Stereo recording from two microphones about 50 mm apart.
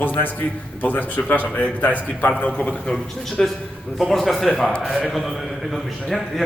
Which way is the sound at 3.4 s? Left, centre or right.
Centre.